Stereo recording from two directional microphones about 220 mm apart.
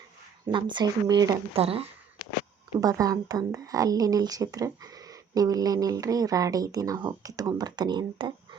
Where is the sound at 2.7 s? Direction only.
15° right (ahead or behind).